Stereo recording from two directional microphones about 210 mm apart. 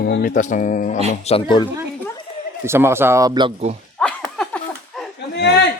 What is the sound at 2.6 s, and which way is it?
Speech, 10° right (ahead or behind).